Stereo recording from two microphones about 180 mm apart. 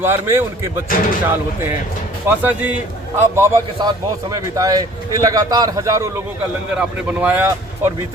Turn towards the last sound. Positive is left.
turn(degrees=-10)  # may be behind; listen again after turning